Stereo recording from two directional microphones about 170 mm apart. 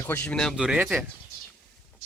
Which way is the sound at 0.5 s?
5° right (ahead or behind).